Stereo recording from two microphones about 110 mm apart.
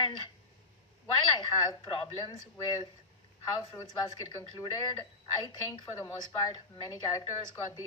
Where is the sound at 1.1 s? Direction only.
45° left (ahead or behind).